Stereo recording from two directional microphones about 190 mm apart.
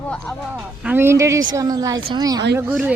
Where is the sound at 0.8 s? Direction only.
10° right (ahead or behind).